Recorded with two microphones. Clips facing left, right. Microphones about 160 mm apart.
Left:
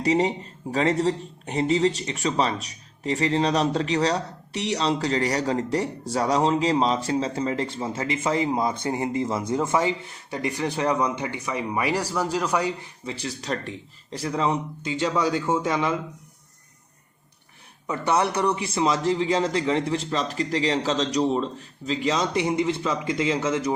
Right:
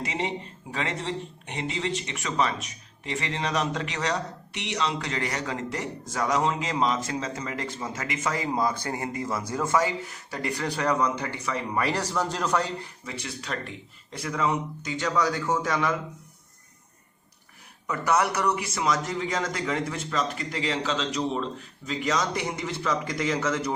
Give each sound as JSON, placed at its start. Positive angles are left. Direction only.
{"t": 0.0, "sound": "speech", "side_deg": 35}
{"t": 13.1, "sound": "a man's voice", "side_deg": 35}
{"t": 17.8, "sound": "a man's voice", "side_deg": 30}